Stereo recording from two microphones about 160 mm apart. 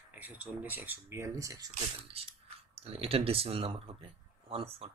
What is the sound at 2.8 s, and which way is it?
Speech, 40° right (ahead or behind).